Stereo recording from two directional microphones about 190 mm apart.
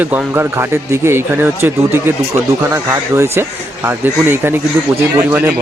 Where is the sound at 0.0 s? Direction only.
10° right (ahead or behind).